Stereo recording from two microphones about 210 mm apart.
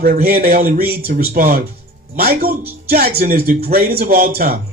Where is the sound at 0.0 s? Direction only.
45° right (ahead or behind).